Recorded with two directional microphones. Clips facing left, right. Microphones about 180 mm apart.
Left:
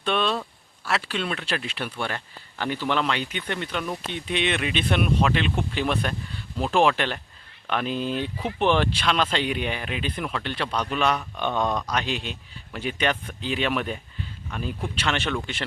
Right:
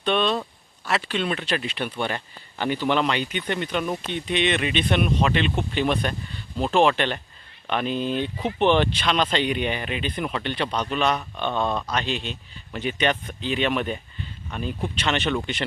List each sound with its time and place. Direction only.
0.0 s speech: 5° left (ahead or behind)
2.0 s speech: 10° right (ahead or behind)